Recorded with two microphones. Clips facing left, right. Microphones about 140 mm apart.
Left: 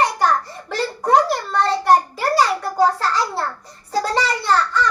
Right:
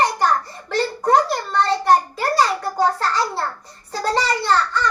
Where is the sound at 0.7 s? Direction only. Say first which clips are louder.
Even; 5° left (ahead or behind).